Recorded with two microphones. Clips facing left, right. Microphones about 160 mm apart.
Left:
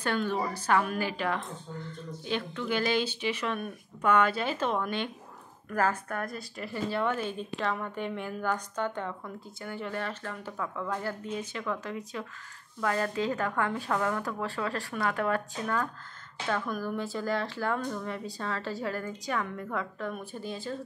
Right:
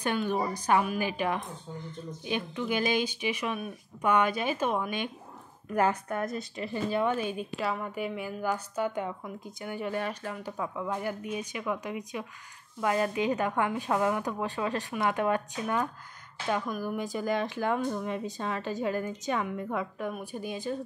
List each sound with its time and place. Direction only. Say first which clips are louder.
0.0 s a woman's voice: right 1 dB; 15° right (ahead or behind)